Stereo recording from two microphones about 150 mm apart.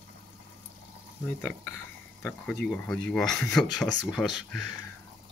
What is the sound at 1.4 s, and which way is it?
Speech, 10° left (ahead or behind).